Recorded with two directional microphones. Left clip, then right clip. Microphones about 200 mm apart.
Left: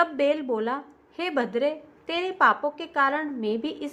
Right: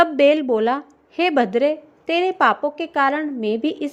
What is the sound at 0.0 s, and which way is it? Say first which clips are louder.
Speech: right 8 dB; 35° right (ahead or behind).